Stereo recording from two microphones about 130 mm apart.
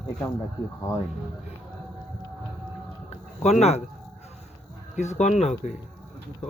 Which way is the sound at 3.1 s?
60° left (ahead or behind).